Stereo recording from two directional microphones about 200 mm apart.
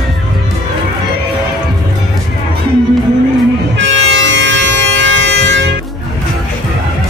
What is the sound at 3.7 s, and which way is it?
Music, 70° right (ahead or behind).